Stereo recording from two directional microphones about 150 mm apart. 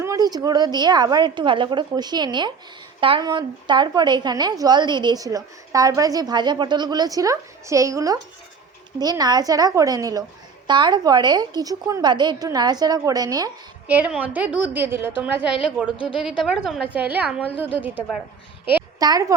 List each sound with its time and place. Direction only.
0.0 s a woman's voice: 25° right (ahead or behind)
13.8 s a woman's voice: 10° right (ahead or behind)
16.0 s a woman's voice: 35° left (ahead or behind)
16.4 s a woman's voice: centre (ahead or behind)
18.9 s a woman's voice: 25° right (ahead or behind)